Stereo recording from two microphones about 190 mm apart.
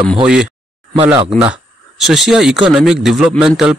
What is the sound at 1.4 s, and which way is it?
Speech, 5° right (ahead or behind).